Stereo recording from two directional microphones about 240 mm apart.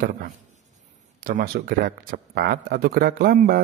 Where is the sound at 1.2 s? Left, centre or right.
Right.